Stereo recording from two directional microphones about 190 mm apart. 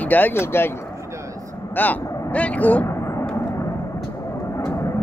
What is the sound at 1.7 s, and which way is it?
Vehicle, 10° left (ahead or behind).